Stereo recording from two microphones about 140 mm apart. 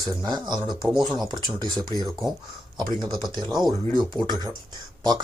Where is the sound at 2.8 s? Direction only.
30° right (ahead or behind).